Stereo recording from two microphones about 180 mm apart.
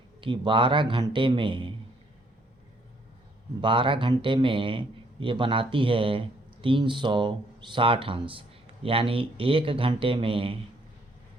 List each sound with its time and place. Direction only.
0.2 s a man's voice: 30° right (ahead or behind)
3.6 s a man's voice: 30° right (ahead or behind)